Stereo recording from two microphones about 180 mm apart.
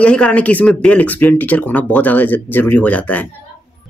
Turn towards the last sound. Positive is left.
turn(degrees=10)  # may be behind; listen again after turning